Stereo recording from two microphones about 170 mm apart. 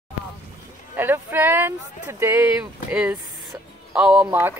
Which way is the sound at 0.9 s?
10° right (ahead or behind).